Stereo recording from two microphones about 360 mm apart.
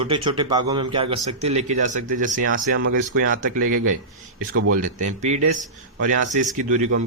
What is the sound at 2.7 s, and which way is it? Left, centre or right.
Speech, right.